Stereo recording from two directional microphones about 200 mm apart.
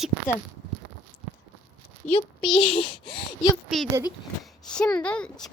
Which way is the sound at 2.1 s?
25° left (ahead or behind).